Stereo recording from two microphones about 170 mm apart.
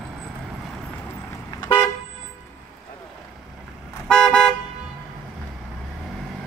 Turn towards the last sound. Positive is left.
turn(degrees=5)  # may be behind; listen again after turning